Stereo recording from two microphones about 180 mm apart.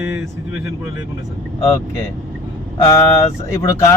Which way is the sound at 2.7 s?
15° left (ahead or behind).